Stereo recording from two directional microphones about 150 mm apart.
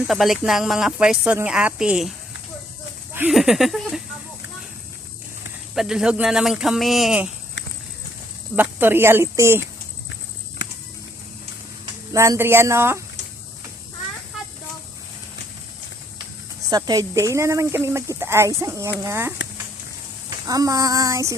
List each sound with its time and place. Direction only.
0.1 s a woman's voice: centre (ahead or behind)
3.3 s a woman's voice: centre (ahead or behind)
5.7 s a woman's voice: 5° right (ahead or behind)
8.5 s speech: 15° right (ahead or behind)
12.1 s speech: 20° right (ahead or behind)
16.6 s speech: 25° right (ahead or behind)
20.5 s speech: 25° right (ahead or behind)